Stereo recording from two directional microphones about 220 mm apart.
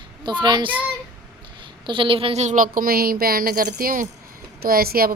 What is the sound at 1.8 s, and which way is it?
A woman's voice, 25° right (ahead or behind).